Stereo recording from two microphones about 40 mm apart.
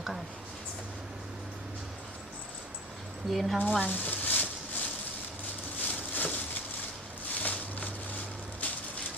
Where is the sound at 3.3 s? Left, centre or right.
Centre.